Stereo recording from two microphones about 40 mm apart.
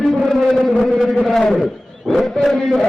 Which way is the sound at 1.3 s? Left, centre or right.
Centre.